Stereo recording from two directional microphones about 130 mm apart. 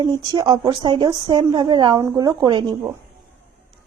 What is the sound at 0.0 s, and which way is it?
Speech, 35° right (ahead or behind).